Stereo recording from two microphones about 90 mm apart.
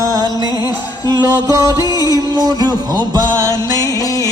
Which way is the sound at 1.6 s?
40° right (ahead or behind).